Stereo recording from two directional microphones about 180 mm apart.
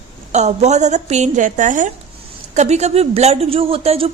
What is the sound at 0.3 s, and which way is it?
A woman's voice, 40° right (ahead or behind).